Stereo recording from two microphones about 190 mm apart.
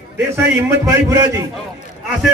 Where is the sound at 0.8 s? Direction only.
15° right (ahead or behind).